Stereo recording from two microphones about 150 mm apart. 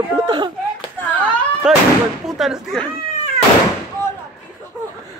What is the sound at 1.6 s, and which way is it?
Speech, 5° right (ahead or behind).